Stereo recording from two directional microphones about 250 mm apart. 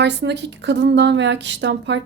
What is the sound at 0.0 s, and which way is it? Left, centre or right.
A woman's voice, right.